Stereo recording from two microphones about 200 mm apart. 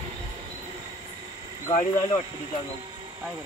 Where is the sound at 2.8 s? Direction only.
20° right (ahead or behind).